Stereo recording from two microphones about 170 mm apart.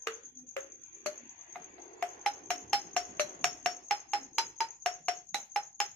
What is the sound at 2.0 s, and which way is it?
Music, 5° left (ahead or behind).